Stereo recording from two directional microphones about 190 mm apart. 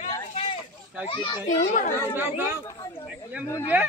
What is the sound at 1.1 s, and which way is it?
Speech, 25° left (ahead or behind).